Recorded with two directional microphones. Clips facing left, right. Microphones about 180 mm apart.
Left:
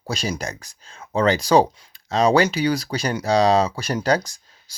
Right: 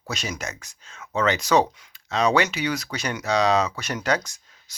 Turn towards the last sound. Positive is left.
turn(degrees=35)  # may be behind; listen again after turning